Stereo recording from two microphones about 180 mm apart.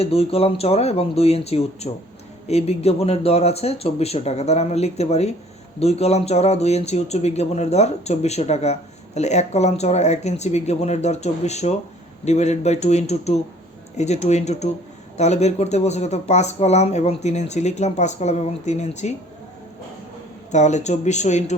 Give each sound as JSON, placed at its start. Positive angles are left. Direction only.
{"t": 0.0, "sound": "speech", "side_deg": 35}
{"t": 20.5, "sound": "speech", "side_deg": 40}